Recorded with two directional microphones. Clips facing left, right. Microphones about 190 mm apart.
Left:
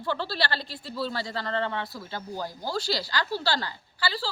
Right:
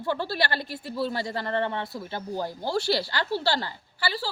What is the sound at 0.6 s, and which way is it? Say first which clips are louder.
Speech: right 4 dB; 55° right (ahead or behind).